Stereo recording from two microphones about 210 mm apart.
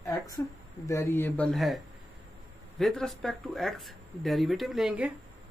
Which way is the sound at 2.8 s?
Centre (ahead or behind).